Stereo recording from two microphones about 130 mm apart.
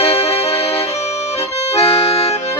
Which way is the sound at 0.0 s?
50° left (ahead or behind).